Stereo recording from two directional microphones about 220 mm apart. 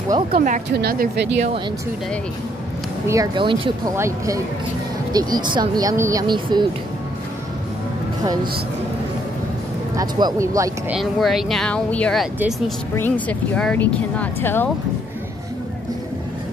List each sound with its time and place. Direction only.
0.3 s speech: 40° right (ahead or behind)
3.1 s speech: 20° right (ahead or behind)
9.9 s speech: 15° right (ahead or behind)
11.0 s speech: centre (ahead or behind)